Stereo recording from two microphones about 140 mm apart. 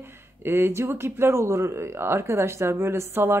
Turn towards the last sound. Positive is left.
turn(degrees=-15)  # may be behind; listen again after turning